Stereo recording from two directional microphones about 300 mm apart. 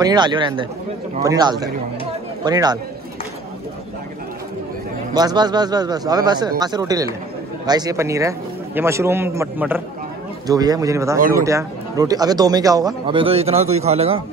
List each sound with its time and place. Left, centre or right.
0.0 s a man's voice: centre
5.1 s a man's voice: centre
11.1 s speech: right
11.4 s a man's voice: centre